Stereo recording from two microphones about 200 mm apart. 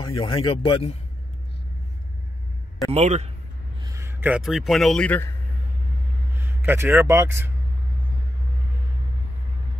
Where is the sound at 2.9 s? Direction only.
35° right (ahead or behind).